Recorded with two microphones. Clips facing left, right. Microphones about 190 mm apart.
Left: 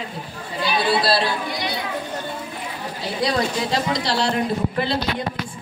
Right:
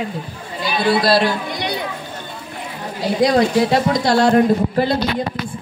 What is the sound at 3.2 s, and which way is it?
Speech, 55° right (ahead or behind).